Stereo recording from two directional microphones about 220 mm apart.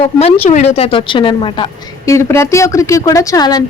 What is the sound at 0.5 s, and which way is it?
A woman's voice, 30° left (ahead or behind).